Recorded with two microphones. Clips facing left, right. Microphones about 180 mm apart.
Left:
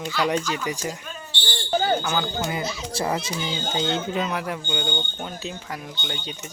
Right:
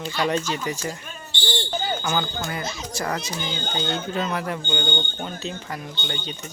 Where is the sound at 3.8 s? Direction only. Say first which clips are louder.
Left 2 dB; 20° left (ahead or behind).